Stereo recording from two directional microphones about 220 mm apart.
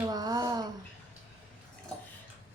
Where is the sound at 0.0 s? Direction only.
20° right (ahead or behind).